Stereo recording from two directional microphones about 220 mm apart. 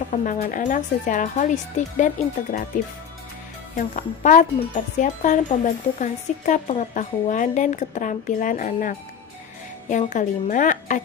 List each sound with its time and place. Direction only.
0.1 s speech: 35° left (ahead or behind)